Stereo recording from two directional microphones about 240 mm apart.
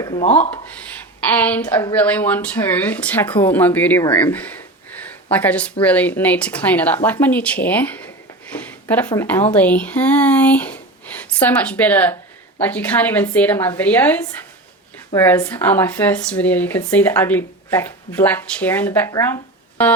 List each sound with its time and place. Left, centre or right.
0.0 s speech: left
1.3 s speech: centre